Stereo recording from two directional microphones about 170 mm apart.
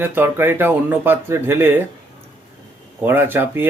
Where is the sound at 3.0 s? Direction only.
10° right (ahead or behind).